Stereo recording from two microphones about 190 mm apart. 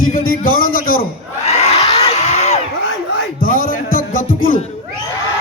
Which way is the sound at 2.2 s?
35° left (ahead or behind).